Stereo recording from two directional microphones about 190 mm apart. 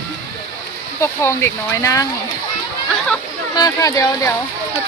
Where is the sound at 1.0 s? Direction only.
15° left (ahead or behind).